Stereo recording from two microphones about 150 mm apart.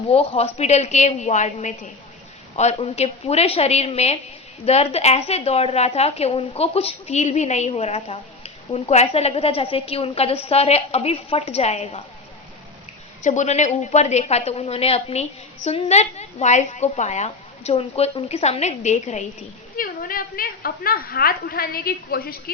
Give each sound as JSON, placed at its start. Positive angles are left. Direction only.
{"t": 0.1, "sound": "a woman's voice", "side_deg": 45}
{"t": 13.2, "sound": "a woman's voice", "side_deg": 55}
{"t": 19.7, "sound": "a woman's voice", "side_deg": 70}